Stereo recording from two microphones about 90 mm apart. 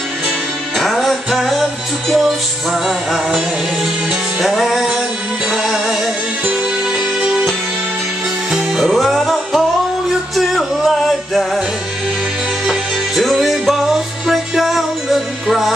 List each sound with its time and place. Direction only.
0.7 s music: centre (ahead or behind)
7.2 s music: 5° right (ahead or behind)
12.6 s music: centre (ahead or behind)